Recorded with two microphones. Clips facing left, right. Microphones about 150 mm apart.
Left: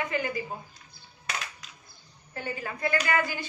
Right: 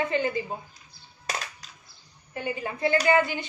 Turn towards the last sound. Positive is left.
turn(degrees=-25)  # may be behind; listen again after turning